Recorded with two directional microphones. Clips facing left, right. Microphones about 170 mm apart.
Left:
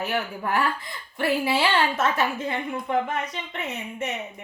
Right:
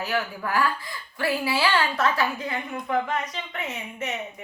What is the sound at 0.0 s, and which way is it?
A woman's voice, 25° left (ahead or behind).